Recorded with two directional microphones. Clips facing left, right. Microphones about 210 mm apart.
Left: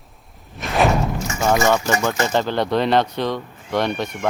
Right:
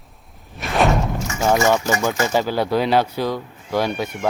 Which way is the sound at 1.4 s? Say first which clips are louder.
Even; 10° right (ahead or behind).